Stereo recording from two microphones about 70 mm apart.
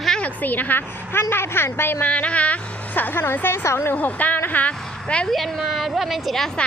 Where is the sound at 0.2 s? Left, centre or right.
Left.